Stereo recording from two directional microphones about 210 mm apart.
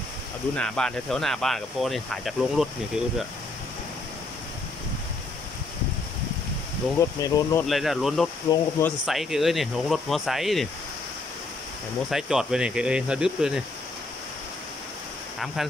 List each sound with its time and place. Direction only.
0.6 s speech: 5° left (ahead or behind)
7.0 s speech: 15° left (ahead or behind)
7.6 s speech: centre (ahead or behind)
8.5 s speech: 15° left (ahead or behind)
9.0 s speech: centre (ahead or behind)
12.1 s speech: centre (ahead or behind)
15.3 s speech: centre (ahead or behind)